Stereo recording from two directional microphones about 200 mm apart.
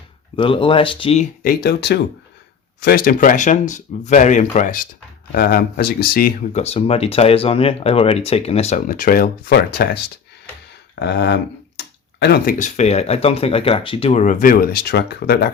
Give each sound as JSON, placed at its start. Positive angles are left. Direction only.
{"t": 0.3, "sound": "speech", "side_deg": 25}
{"t": 6.6, "sound": "speech", "side_deg": 30}
{"t": 11.0, "sound": "speech", "side_deg": 60}
{"t": 12.5, "sound": "speech", "side_deg": 35}